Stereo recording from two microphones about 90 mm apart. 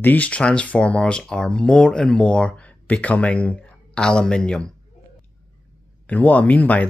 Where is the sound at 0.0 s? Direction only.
20° left (ahead or behind).